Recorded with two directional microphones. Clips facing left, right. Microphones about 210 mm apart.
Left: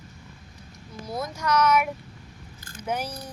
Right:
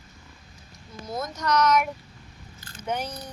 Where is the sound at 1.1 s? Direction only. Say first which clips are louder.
Even; 10° left (ahead or behind).